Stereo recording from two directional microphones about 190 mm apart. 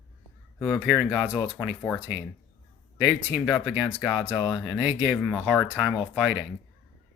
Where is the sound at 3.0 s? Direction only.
5° right (ahead or behind).